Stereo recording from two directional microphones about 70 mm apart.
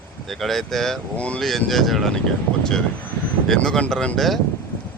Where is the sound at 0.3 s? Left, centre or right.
Centre.